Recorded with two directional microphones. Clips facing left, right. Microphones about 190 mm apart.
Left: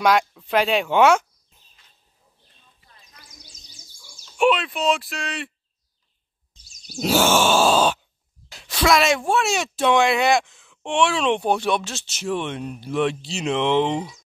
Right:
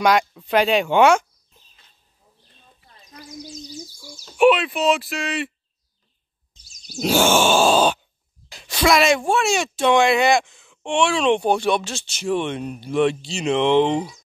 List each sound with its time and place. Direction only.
0.0 s speech: centre (ahead or behind)
3.0 s bird: 40° right (ahead or behind)
4.4 s speech: 5° right (ahead or behind)
7.0 s speech: 5° left (ahead or behind)